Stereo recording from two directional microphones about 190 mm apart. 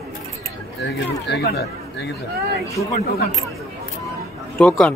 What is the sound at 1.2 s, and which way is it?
Speech, 60° left (ahead or behind).